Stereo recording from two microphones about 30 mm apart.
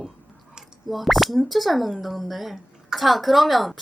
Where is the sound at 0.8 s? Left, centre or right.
Centre.